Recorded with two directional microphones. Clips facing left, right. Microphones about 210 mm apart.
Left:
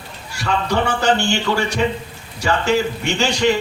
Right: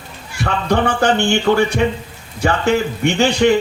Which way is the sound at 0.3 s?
55° right (ahead or behind).